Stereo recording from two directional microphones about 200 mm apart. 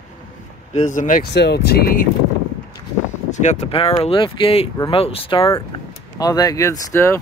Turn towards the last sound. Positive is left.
turn(degrees=15)  # may be behind; listen again after turning